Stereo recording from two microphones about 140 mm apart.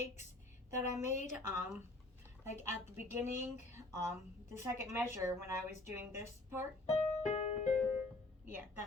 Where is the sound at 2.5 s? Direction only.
55° left (ahead or behind).